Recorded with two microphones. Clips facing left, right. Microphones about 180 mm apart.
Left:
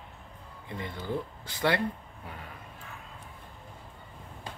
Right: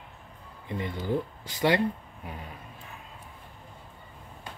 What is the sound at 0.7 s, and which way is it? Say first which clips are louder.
Speech: right 5 dB; 15° right (ahead or behind).